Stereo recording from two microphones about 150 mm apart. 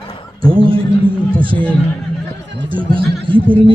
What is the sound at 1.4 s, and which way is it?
Music, 35° right (ahead or behind).